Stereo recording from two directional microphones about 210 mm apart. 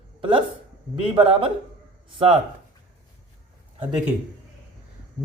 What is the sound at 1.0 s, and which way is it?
Speech, 25° right (ahead or behind).